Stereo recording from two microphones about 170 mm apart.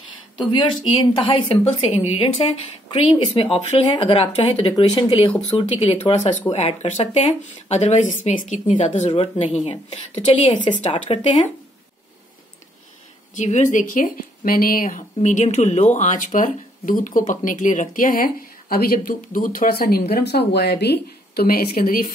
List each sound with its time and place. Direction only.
0.4 s speech: 30° left (ahead or behind)
13.4 s speech: 45° left (ahead or behind)